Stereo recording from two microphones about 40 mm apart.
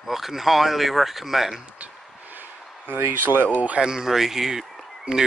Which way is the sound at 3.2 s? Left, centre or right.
Right.